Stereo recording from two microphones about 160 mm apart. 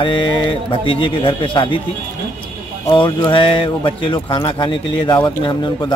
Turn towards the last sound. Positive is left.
turn(degrees=30)  # may be behind; listen again after turning